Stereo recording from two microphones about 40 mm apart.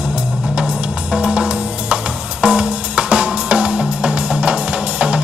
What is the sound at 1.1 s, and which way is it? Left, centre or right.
Music, right.